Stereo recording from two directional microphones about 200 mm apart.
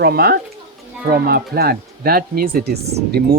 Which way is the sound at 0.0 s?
50° right (ahead or behind).